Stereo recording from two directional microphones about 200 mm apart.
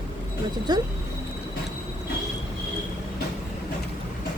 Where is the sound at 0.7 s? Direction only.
20° right (ahead or behind).